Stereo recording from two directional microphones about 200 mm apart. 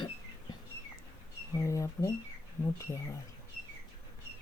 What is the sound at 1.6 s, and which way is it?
Speech, 15° left (ahead or behind).